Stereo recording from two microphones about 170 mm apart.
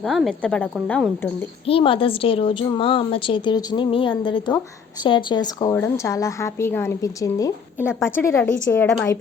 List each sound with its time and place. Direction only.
0.0 s speech: centre (ahead or behind)
1.6 s a woman's voice: 30° left (ahead or behind)
7.9 s speech: 5° right (ahead or behind)
8.1 s a woman's voice: 15° left (ahead or behind)